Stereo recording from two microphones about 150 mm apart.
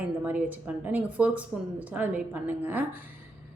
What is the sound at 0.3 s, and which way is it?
A woman's voice, 10° right (ahead or behind).